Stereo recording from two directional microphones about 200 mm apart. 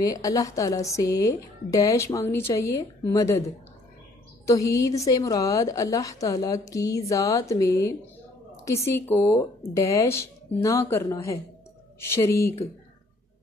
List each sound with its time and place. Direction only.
0.0 s a woman's voice: 15° left (ahead or behind)
4.5 s a woman's voice: 15° left (ahead or behind)